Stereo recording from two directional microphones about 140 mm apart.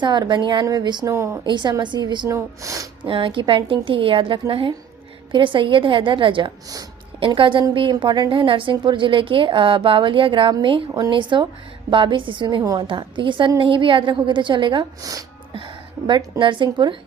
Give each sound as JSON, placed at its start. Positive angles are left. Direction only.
{"t": 0.0, "sound": "a woman's voice", "side_deg": -35}
{"t": 1.1, "sound": "speech", "side_deg": -20}
{"t": 1.5, "sound": "a woman's voice", "side_deg": -35}
{"t": 3.0, "sound": "a woman's voice", "side_deg": -40}
{"t": 15.5, "sound": "music", "side_deg": -35}
{"t": 16.4, "sound": "a woman's voice", "side_deg": -35}